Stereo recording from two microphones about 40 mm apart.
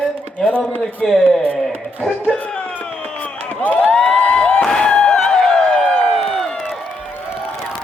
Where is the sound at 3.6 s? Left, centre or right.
Left.